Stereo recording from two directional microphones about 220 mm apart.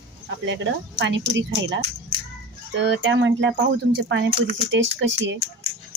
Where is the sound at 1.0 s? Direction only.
55° right (ahead or behind).